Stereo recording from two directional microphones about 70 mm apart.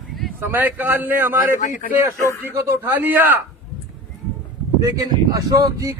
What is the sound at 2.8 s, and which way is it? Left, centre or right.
Speech, right.